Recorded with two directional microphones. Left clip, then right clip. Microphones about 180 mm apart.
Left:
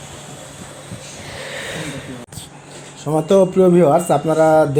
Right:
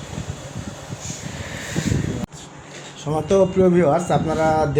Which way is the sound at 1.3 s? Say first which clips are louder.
Left 7 dB; 55° left (ahead or behind).